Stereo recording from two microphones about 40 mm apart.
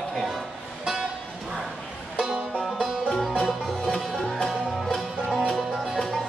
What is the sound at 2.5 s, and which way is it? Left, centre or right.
Music, centre.